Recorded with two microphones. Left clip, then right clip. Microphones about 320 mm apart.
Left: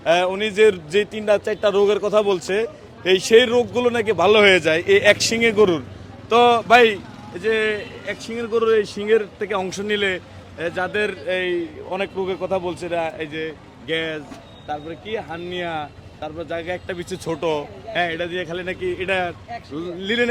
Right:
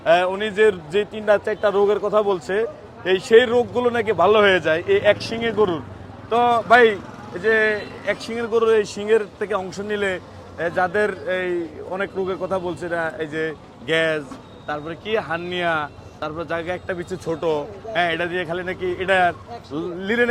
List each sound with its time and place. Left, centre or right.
0.0 s a man's voice: centre
7.4 s a man's voice: centre
10.6 s a man's voice: centre